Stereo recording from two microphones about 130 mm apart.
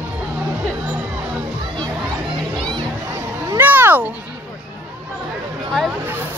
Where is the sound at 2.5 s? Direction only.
35° right (ahead or behind).